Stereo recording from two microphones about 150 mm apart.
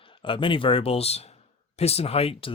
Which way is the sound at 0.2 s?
35° left (ahead or behind).